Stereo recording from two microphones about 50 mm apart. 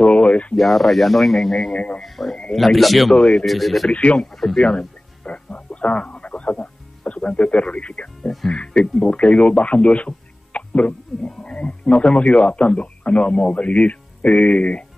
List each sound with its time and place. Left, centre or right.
0.0 s a sound: left
0.6 s speech: centre
3.2 s a man's voice: centre
3.4 s speech: centre
3.9 s a man's voice: left
4.3 s speech: centre
4.6 s music: left
7.2 s a man's voice: left